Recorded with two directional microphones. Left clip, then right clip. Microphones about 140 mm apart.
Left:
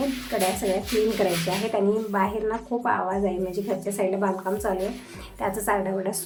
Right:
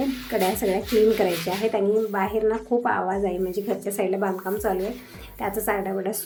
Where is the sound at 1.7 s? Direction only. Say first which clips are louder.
Right 1 dB; 5° right (ahead or behind).